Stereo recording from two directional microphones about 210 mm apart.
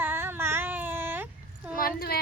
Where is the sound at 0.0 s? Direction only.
10° right (ahead or behind).